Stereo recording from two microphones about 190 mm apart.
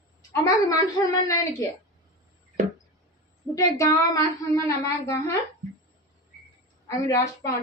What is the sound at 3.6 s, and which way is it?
A woman's voice, 15° left (ahead or behind).